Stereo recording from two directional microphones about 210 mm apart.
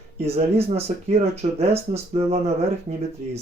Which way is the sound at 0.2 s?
30° right (ahead or behind).